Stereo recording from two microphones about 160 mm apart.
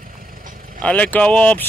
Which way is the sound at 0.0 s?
55° right (ahead or behind).